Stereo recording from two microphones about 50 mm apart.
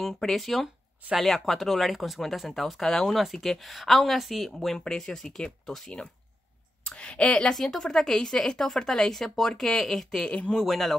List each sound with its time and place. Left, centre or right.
0.0 s speech: centre
10.2 s speech: left
10.5 s speech: centre